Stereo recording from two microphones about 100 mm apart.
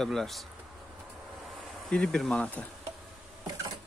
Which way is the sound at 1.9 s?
10° left (ahead or behind).